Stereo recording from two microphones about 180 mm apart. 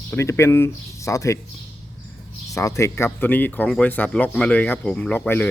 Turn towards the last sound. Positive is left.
turn(degrees=10)  # may be behind; listen again after turning